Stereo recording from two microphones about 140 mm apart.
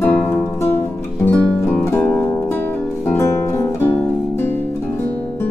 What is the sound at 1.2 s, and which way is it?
Music, 15° left (ahead or behind).